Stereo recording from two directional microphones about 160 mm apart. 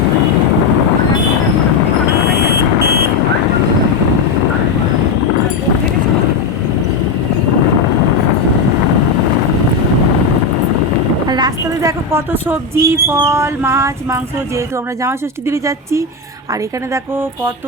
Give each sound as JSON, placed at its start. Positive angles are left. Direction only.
{"t": 11.3, "sound": "speech", "side_deg": -25}